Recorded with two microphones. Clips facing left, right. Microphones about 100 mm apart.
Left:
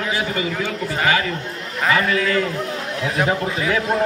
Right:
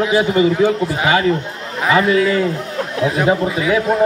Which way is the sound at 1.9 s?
20° right (ahead or behind).